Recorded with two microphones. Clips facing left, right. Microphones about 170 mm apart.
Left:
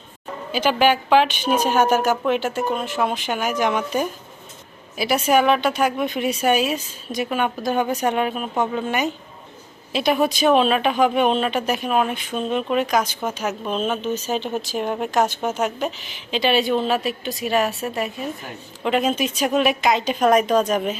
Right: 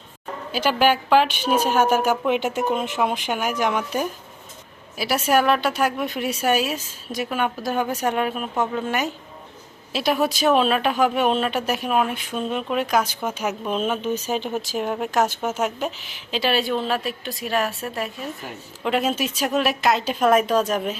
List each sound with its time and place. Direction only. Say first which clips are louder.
0.5 s speech: left 1 dB; 5° right (ahead or behind)